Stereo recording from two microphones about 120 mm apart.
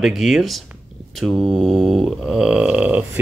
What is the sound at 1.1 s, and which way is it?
Mantra, centre (ahead or behind).